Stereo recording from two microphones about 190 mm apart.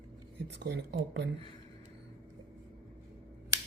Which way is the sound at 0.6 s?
60° right (ahead or behind).